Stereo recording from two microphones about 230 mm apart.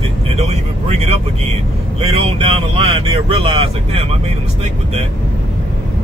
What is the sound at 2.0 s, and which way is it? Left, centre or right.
Speech, right.